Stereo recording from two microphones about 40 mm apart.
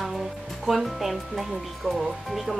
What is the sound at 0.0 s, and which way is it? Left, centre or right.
Speech, centre.